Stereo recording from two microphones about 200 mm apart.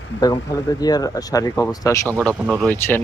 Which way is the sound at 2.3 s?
5° right (ahead or behind).